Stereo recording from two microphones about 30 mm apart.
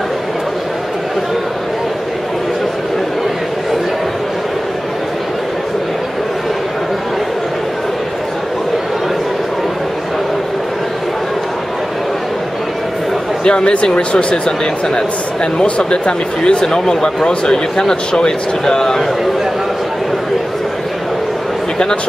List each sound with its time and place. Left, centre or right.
13.4 s speech: left
14.1 s speech: left
15.8 s speech: left
16.6 s speech: centre